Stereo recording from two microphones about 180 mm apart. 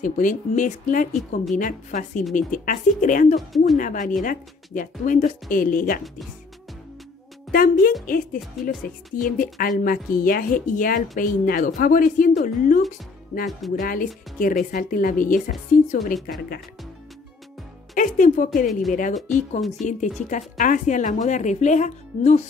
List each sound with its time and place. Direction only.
0.0 s a woman's voice: 45° left (ahead or behind)
3.3 s a woman's voice: centre (ahead or behind)
3.7 s a woman's voice: 45° left (ahead or behind)
7.5 s a woman's voice: 50° left (ahead or behind)
17.9 s a woman's voice: 45° left (ahead or behind)